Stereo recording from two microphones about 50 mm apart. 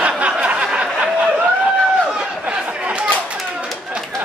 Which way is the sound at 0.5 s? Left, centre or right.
Centre.